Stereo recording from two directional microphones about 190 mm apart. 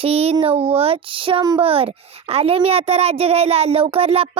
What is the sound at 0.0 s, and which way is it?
Speech, 30° right (ahead or behind).